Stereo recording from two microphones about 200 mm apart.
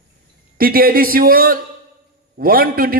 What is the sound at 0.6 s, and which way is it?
A man's voice, 45° right (ahead or behind).